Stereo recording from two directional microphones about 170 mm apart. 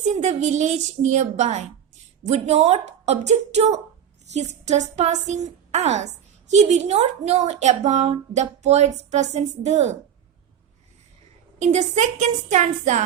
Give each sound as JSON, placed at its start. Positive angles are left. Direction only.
{"t": 0.0, "sound": "a woman's voice", "side_deg": -45}
{"t": 11.6, "sound": "a woman's voice", "side_deg": -45}